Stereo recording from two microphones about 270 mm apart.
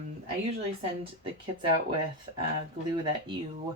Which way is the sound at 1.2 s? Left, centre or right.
Centre.